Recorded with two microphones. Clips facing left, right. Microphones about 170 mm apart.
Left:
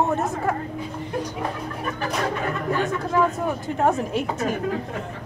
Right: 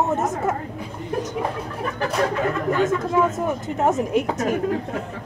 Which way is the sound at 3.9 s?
20° right (ahead or behind).